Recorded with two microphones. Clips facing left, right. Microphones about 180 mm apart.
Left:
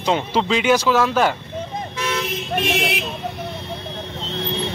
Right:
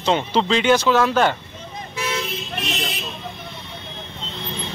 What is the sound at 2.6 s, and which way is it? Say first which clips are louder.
Speech: left 6 dB; 60° left (ahead or behind).